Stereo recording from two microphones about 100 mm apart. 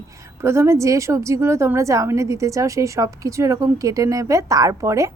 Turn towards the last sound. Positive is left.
turn(degrees=-30)  # may be behind; listen again after turning